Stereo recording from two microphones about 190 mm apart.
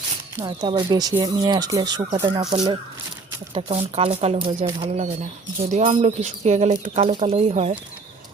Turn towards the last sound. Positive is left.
turn(degrees=-30)  # may be behind; listen again after turning